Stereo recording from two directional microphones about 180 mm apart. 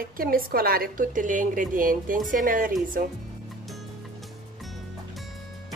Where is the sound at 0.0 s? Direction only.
55° right (ahead or behind).